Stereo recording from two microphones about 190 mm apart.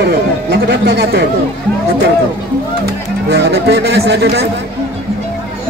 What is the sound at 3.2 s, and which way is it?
A man's voice, 60° right (ahead or behind).